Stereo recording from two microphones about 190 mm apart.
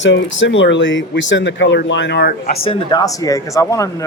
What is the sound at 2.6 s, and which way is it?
Speech, 20° left (ahead or behind).